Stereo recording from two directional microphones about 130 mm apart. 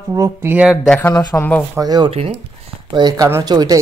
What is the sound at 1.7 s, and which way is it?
Speech, 30° right (ahead or behind).